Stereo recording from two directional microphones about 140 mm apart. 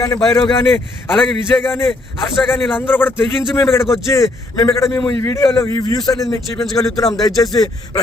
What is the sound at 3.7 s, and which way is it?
A man's voice, 20° left (ahead or behind).